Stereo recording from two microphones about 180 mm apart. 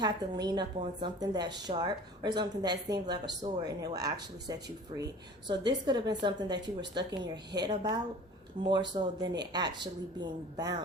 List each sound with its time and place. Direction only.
0.0 s speech: 25° right (ahead or behind)